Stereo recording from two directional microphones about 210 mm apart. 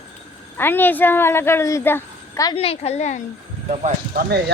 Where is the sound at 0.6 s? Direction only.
10° left (ahead or behind).